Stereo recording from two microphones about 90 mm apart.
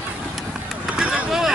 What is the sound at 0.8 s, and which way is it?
Vehicle, 10° right (ahead or behind).